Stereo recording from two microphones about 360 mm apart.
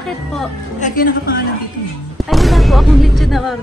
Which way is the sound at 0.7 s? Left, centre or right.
Left.